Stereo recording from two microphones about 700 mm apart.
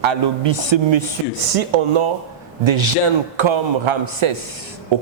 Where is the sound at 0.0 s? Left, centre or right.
Right.